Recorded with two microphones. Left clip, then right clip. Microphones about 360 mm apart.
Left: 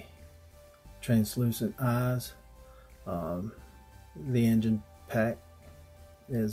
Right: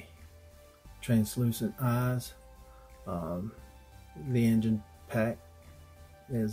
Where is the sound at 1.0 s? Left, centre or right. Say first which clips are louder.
Left 1 dB; centre.